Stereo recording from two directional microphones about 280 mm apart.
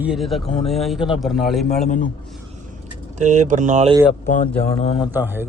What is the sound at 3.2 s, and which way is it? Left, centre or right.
Speech, right.